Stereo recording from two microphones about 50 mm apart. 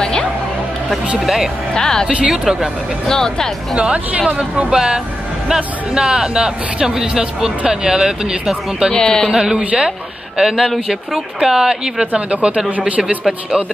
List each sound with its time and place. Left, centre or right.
1.2 s speech: centre
1.7 s speech: centre
2.2 s speech: centre
3.1 s speech: centre
3.7 s speech: right
4.6 s a man's voice: centre
8.9 s speech: centre
9.3 s a man's voice: centre
12.1 s speech: right